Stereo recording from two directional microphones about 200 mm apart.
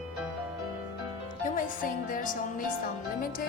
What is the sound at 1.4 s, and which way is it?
Speech, 40° left (ahead or behind).